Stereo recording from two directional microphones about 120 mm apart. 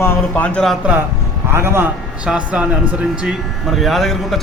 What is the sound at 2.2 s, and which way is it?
Speech, 10° right (ahead or behind).